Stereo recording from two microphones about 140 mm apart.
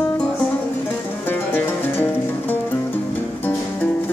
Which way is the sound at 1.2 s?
15° left (ahead or behind).